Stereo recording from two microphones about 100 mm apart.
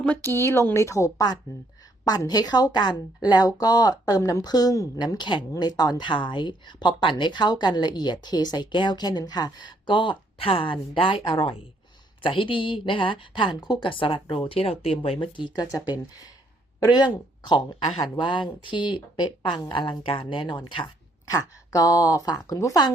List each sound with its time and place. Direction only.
0.0 s a woman's voice: 20° left (ahead or behind); by 4.2 s 40° left (ahead or behind)
4.2 s a woman's voice: 30° left (ahead or behind)
4.4 s a woman's voice: 40° left (ahead or behind)
16.8 s speech: 45° left (ahead or behind)
21.2 s a woman's voice: 35° left (ahead or behind)